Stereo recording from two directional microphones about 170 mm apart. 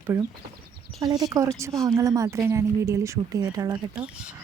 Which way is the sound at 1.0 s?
20° right (ahead or behind).